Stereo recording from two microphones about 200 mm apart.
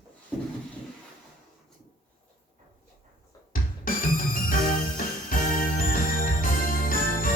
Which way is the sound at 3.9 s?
45° left (ahead or behind).